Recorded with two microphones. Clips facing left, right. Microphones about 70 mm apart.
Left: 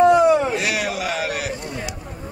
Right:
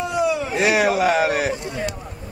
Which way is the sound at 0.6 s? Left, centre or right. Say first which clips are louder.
Right 6 dB; right.